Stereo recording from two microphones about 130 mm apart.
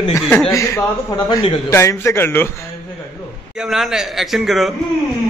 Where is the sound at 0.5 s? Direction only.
25° left (ahead or behind).